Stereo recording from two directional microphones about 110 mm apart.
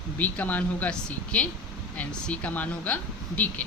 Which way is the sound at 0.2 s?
15° left (ahead or behind).